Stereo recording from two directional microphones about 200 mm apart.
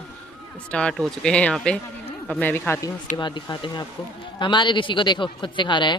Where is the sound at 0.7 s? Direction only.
5° left (ahead or behind).